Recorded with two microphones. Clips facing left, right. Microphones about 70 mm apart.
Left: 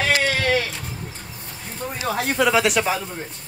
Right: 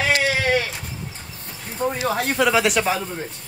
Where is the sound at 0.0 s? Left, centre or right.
Centre.